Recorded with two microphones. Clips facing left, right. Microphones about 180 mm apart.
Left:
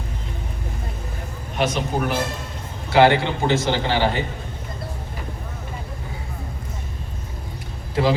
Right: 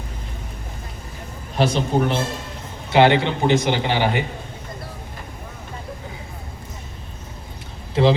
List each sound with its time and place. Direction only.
1.5 s a man's voice: 30° right (ahead or behind)